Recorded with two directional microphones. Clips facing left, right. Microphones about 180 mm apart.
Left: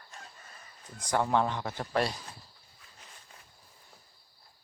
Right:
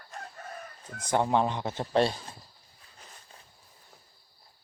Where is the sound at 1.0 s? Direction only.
20° right (ahead or behind).